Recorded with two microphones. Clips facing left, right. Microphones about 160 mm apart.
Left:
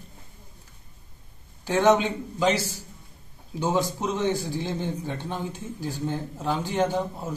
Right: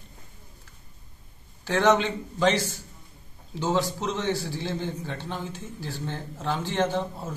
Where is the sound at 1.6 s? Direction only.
15° left (ahead or behind).